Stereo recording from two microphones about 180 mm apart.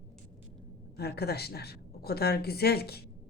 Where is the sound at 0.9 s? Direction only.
65° left (ahead or behind).